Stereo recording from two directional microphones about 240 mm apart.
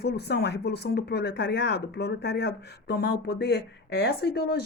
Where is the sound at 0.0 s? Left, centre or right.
Left.